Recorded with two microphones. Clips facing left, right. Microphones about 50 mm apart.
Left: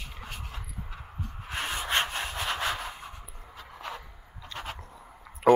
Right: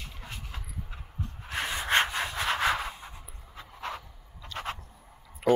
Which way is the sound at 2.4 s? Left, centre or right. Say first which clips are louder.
Right 5 dB; right.